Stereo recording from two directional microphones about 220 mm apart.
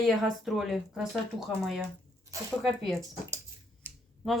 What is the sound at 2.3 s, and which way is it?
Zipper, 15° right (ahead or behind).